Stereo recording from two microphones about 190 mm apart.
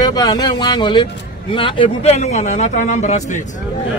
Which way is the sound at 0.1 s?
20° left (ahead or behind).